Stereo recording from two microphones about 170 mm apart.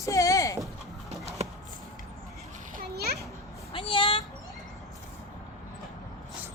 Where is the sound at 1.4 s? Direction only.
40° right (ahead or behind).